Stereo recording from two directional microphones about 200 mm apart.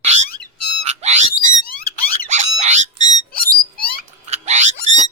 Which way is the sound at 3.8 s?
50° left (ahead or behind).